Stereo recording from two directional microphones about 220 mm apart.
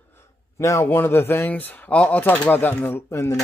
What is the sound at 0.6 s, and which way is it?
Speech, 15° left (ahead or behind).